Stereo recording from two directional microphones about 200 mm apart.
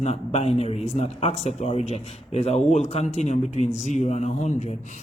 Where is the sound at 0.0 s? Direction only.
30° left (ahead or behind).